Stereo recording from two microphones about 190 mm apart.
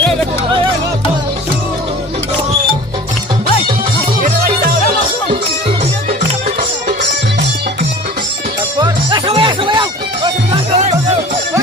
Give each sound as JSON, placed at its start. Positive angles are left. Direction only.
{"t": 8.8, "sound": "music", "side_deg": -25}